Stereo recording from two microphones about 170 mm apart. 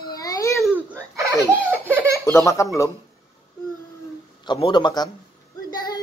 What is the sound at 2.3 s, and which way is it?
Speech, 20° left (ahead or behind).